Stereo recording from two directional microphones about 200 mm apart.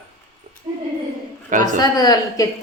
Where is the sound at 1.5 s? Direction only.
40° right (ahead or behind).